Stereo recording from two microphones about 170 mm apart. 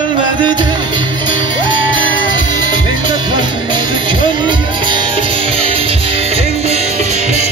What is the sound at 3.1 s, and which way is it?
Music, 25° right (ahead or behind).